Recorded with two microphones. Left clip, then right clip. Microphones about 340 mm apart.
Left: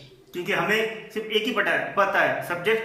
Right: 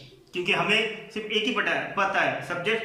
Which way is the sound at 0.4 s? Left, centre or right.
Centre.